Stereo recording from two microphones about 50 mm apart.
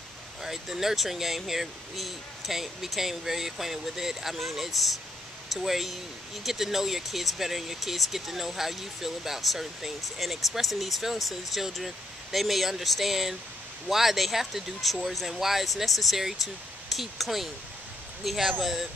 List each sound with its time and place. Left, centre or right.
0.4 s speech: centre